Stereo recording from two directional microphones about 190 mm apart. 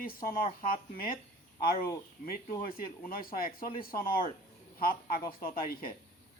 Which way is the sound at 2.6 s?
50° left (ahead or behind).